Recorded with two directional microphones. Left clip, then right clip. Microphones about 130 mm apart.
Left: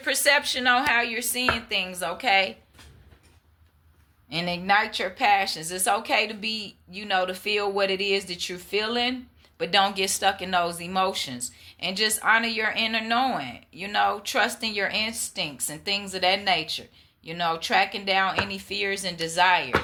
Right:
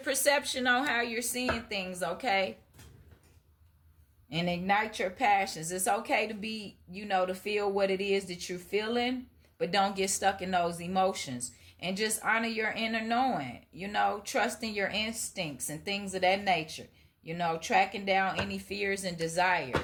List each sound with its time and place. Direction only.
0.0 s speech: 30° right (ahead or behind)
4.3 s speech: 30° right (ahead or behind)
18.4 s chopping: 30° right (ahead or behind)